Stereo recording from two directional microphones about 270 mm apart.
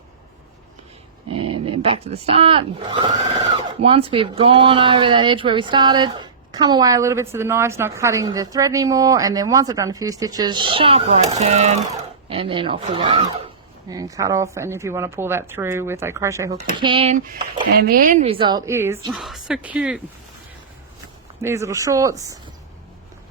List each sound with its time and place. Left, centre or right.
1.6 s speech: right
17.7 s speech: right; by 20.0 s centre
21.4 s speech: centre